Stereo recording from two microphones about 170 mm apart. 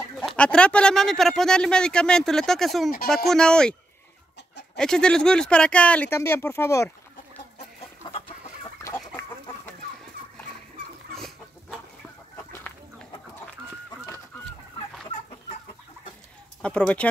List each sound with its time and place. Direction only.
0.2 s speech: 5° left (ahead or behind)
4.7 s speech: 5° left (ahead or behind)
8.0 s chicken: 30° left (ahead or behind)
8.8 s chicken: 15° left (ahead or behind)
11.1 s chicken: centre (ahead or behind)
15.1 s chicken: 45° left (ahead or behind)
16.6 s speech: 5° left (ahead or behind)